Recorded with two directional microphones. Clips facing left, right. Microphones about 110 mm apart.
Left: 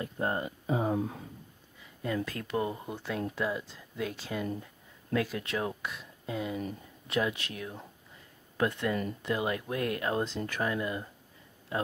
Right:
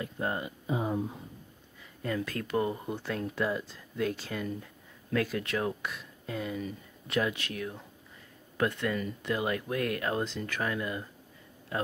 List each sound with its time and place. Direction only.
0.0 s a sound: 35° left (ahead or behind)
2.2 s speech: 20° left (ahead or behind)
8.9 s speech: 35° left (ahead or behind)
9.3 s speech: 20° left (ahead or behind)